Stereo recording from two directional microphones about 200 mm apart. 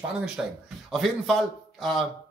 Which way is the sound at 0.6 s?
Centre (ahead or behind).